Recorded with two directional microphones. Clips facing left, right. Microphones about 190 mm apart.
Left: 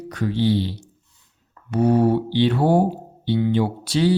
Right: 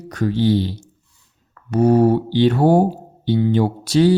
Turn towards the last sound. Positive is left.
turn(degrees=-45)  # may be behind; listen again after turning